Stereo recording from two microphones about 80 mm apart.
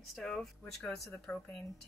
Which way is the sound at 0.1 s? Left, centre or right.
Centre.